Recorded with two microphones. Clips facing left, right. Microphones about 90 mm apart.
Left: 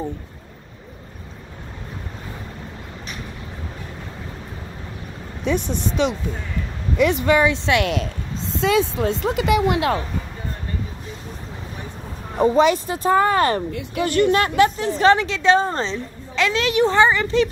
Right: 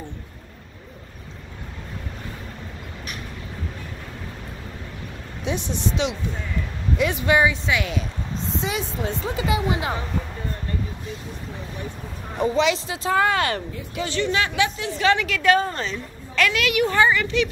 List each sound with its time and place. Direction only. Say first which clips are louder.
5.4 s speech: left 4 dB; 50° left (ahead or behind)
7.5 s speech: left 5 dB; 70° left (ahead or behind)
8.5 s a woman's voice: left 10 dB; 90° left
12.4 s speech: left 5 dB; 40° left (ahead or behind)
13.9 s a woman's voice: left 6 dB; 55° left (ahead or behind); by 17.5 s 35° left (ahead or behind)